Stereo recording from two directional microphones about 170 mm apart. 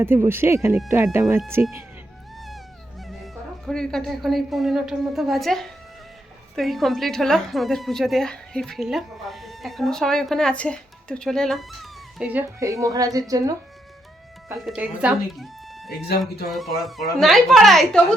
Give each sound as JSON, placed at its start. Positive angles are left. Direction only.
{"t": 0.0, "sound": "speech", "side_deg": -15}
{"t": 3.7, "sound": "a woman's voice", "side_deg": 5}
{"t": 14.5, "sound": "a woman's voice", "side_deg": 0}